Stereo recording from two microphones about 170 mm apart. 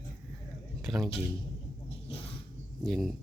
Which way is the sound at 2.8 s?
Centre (ahead or behind).